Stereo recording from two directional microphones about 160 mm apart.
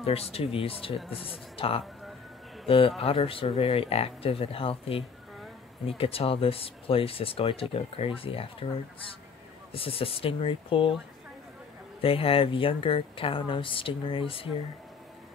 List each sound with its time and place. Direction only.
0.0 s speech: 40° left (ahead or behind)
3.0 s speech: 35° left (ahead or behind)
9.7 s speech: 35° left (ahead or behind)
12.0 s speech: 35° left (ahead or behind)